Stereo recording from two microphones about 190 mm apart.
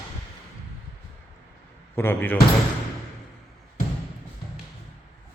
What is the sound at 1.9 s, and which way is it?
Speech, 10° left (ahead or behind).